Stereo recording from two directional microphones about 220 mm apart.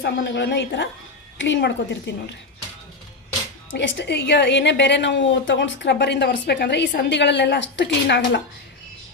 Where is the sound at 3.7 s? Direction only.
55° left (ahead or behind).